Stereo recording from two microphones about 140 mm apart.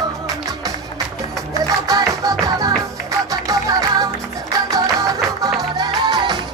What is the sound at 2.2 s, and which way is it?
Music, 25° right (ahead or behind).